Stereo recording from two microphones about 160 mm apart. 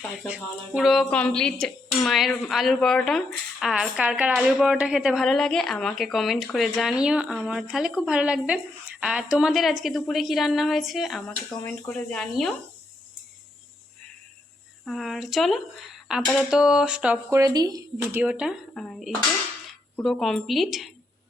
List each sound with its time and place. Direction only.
0.3 s a woman's voice: 5° right (ahead or behind)
14.8 s a woman's voice: centre (ahead or behind)
17.4 s speech: 25° right (ahead or behind)
18.2 s a woman's voice: 5° right (ahead or behind)